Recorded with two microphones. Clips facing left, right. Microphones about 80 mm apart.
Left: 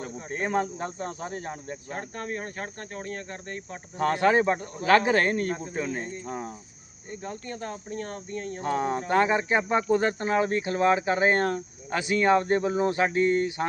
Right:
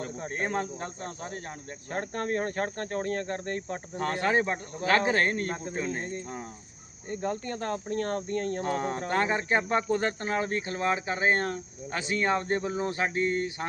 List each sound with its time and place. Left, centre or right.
0.2 s speech: right
0.4 s speech: left
1.9 s speech: right
3.9 s speech: left
5.4 s speech: right
5.7 s speech: left
6.0 s speech: right
6.2 s speech: left
7.1 s speech: right
8.6 s speech: left
13.1 s speech: right